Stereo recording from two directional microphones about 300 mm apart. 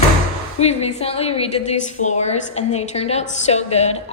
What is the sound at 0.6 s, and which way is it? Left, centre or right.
A woman's voice, left.